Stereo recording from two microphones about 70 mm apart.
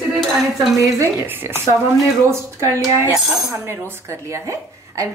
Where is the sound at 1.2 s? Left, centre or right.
Right.